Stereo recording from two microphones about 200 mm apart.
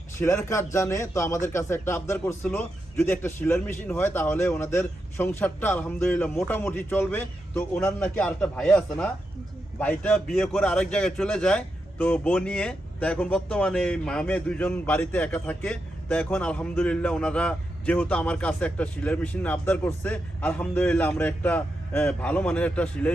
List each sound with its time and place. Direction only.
0.2 s a man's voice: 15° left (ahead or behind)